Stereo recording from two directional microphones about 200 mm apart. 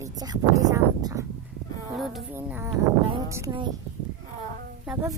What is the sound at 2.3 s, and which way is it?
Speech, 10° right (ahead or behind).